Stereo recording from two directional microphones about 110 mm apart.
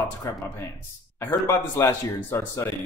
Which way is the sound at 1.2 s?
20° left (ahead or behind).